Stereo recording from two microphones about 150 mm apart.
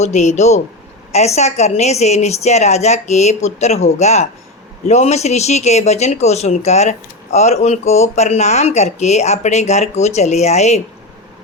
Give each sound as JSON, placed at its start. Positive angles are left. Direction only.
{"t": 0.0, "sound": "speech", "side_deg": 50}